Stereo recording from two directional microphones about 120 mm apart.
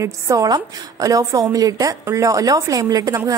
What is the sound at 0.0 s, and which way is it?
A woman's voice, 30° right (ahead or behind).